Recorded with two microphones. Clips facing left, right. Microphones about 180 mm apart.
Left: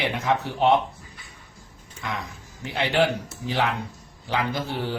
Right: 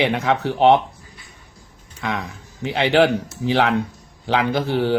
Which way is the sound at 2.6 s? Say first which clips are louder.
Right 6 dB; 75° right (ahead or behind).